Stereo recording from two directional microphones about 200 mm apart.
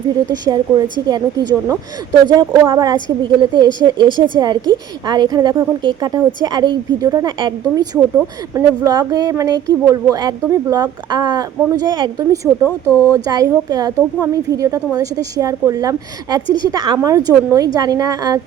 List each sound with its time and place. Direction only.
0.3 s a woman's voice: 20° right (ahead or behind)